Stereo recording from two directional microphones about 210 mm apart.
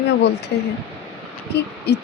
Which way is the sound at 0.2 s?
55° left (ahead or behind).